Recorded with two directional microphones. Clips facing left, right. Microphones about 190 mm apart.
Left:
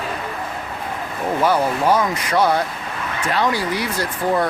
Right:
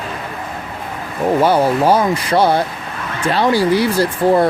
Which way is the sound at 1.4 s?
30° right (ahead or behind).